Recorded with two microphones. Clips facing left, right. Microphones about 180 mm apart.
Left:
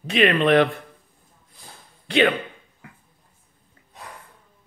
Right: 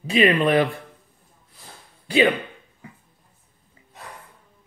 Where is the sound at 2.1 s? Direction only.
5° right (ahead or behind).